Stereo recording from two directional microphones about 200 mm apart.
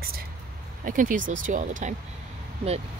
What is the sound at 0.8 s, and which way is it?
Speech, 40° right (ahead or behind).